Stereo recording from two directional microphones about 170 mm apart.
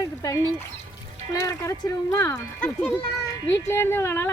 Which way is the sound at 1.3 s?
20° left (ahead or behind).